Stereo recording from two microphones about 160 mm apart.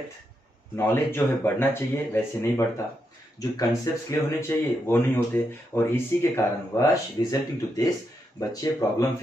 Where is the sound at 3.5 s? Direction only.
20° left (ahead or behind).